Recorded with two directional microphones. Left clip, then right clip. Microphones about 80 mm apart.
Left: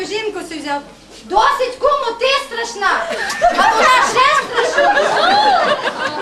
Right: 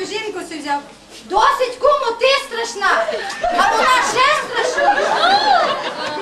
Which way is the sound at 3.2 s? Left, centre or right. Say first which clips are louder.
Left 6 dB; left.